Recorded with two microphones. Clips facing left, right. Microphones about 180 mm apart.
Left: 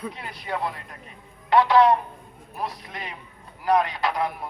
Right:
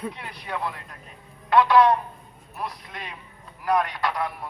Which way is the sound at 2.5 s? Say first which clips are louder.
Left 2 dB; 25° left (ahead or behind).